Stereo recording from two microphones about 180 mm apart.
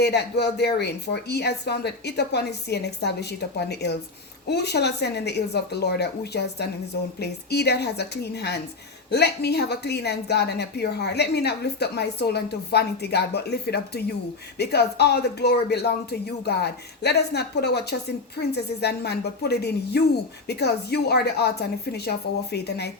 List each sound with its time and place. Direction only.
0.0 s a woman's voice: 65° left (ahead or behind)